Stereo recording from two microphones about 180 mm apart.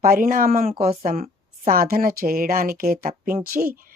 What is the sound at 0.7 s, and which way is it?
Speech, 35° right (ahead or behind).